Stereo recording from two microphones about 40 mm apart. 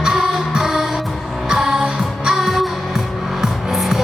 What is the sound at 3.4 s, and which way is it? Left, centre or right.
Music, centre.